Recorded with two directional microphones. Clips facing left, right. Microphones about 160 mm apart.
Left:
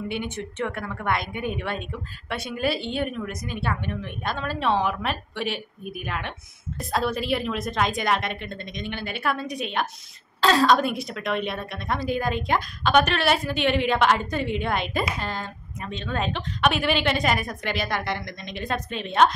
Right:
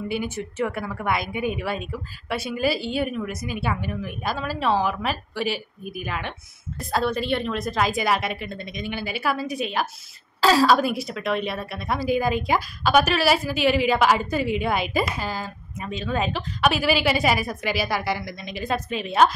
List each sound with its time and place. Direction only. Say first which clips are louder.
0.1 s a woman's voice: right 2 dB; 5° right (ahead or behind)